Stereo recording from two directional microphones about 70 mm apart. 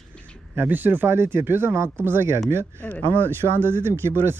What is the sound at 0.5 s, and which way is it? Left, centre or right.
Speech, right.